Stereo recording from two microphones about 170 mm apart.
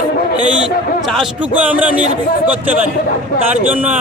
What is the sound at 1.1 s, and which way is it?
Speech, 5° right (ahead or behind).